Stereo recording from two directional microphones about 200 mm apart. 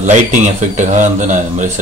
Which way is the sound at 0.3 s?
35° right (ahead or behind).